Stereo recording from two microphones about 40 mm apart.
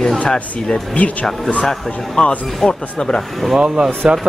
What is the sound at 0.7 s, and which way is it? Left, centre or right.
Speech, left.